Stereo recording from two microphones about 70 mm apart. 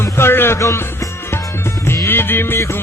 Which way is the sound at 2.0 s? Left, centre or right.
Left.